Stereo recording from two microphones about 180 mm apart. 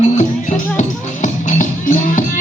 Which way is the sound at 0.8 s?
45° left (ahead or behind).